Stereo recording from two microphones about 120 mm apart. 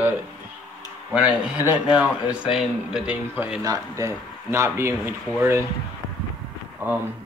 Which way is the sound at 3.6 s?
25° right (ahead or behind).